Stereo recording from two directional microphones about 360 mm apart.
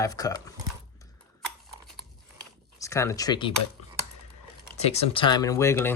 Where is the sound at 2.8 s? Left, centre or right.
Centre.